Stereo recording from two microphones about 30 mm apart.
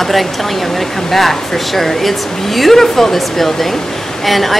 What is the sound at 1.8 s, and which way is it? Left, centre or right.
A woman's voice, centre.